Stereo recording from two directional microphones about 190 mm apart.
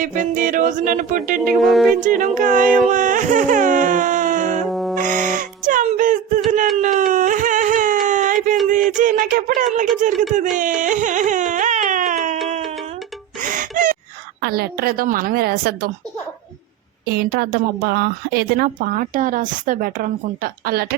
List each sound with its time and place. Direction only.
0.0 s a woman's voice: 45° right (ahead or behind)
1.5 s speech: centre (ahead or behind)
2.0 s a woman's voice: 45° right (ahead or behind)
2.9 s music: 45° right (ahead or behind)
4.7 s music: centre (ahead or behind)
4.9 s music: 45° right (ahead or behind)
6.8 s a sound: 45° right (ahead or behind)
10.0 s speech: 40° right (ahead or behind)
10.6 s music: 40° right (ahead or behind)
13.4 s gasp: 45° right (ahead or behind)
14.4 s a woman's voice: 55° right (ahead or behind)
17.1 s a woman's voice: 55° right (ahead or behind)